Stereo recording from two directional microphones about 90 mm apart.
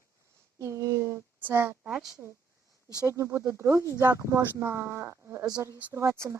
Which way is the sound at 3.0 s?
30° right (ahead or behind).